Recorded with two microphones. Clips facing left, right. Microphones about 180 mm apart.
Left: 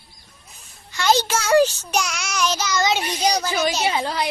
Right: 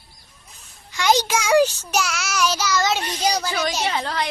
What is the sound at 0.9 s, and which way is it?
Speech, 15° right (ahead or behind).